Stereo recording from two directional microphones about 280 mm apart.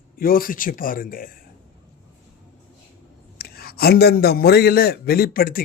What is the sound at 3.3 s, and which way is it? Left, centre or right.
A man's voice, left.